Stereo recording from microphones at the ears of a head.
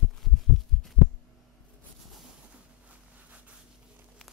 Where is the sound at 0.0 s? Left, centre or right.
Left.